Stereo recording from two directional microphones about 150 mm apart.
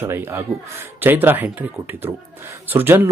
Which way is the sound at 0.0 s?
15° right (ahead or behind).